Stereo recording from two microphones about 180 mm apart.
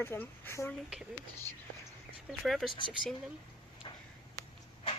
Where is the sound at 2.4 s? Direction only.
Centre (ahead or behind).